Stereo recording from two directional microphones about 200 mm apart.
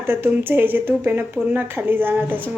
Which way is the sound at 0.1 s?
10° right (ahead or behind).